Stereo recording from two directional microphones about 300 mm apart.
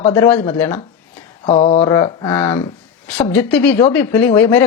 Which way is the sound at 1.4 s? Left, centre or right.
Left.